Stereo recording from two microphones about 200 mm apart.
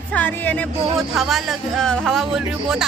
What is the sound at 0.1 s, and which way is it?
Speech, 10° left (ahead or behind).